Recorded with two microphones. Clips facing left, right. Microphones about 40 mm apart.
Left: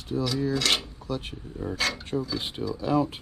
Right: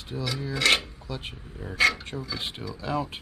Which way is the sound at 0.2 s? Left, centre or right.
Right.